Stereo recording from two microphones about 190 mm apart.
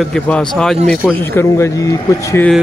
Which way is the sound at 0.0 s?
5° left (ahead or behind).